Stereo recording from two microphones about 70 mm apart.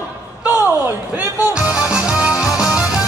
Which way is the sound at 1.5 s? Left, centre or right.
Centre.